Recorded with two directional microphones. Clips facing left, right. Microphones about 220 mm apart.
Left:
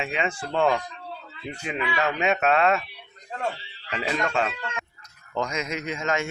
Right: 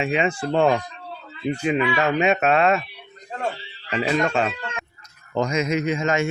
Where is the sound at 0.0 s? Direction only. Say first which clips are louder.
Right 6 dB; 10° right (ahead or behind).